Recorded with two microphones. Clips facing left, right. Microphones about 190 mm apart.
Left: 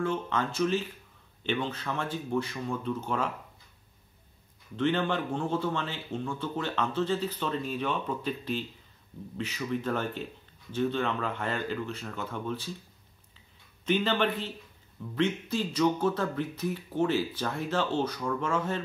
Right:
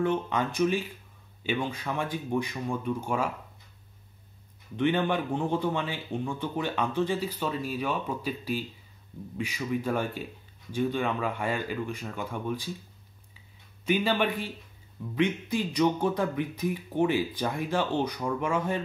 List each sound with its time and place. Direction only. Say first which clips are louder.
0.0 s speech: right 3 dB; 15° right (ahead or behind)
4.7 s speech: right 2 dB; 15° right (ahead or behind)
13.8 s speech: right 1 dB; 10° right (ahead or behind)